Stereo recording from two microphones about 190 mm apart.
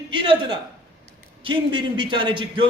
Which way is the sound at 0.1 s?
25° right (ahead or behind).